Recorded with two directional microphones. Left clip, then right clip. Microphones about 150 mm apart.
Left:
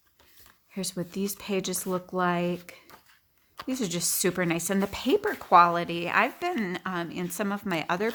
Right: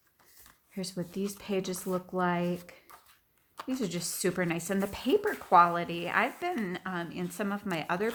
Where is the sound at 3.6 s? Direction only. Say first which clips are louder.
Left 4 dB; 45° left (ahead or behind).